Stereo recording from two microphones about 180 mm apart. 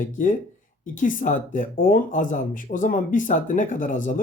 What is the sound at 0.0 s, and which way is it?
Speech, 45° left (ahead or behind).